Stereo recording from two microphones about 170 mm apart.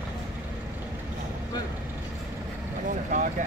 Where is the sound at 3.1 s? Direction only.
50° right (ahead or behind).